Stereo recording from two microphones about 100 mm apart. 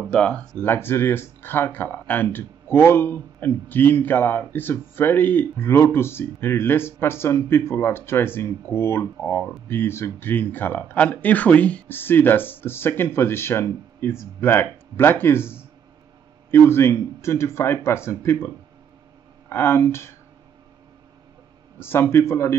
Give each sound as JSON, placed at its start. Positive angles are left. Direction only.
{"t": 0.1, "sound": "speech", "side_deg": 10}
{"t": 0.7, "sound": "speech", "side_deg": 20}
{"t": 19.5, "sound": "speech", "side_deg": 20}
{"t": 21.7, "sound": "speech", "side_deg": 25}